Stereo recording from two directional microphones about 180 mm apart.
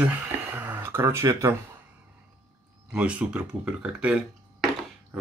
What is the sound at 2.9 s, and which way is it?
Speech, 5° right (ahead or behind).